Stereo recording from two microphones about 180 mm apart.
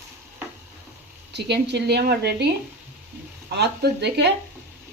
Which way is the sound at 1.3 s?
70° right (ahead or behind).